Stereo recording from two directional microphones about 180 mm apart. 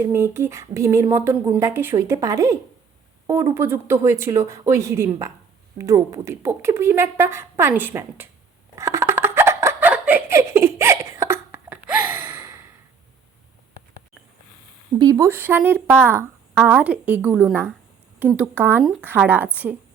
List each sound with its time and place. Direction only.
0.0 s a woman's voice: 15° right (ahead or behind)
8.7 s a sound: 15° right (ahead or behind)
14.9 s a woman's voice: 20° right (ahead or behind)